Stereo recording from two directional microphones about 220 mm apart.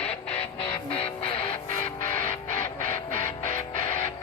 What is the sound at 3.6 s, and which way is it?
Music, 30° left (ahead or behind).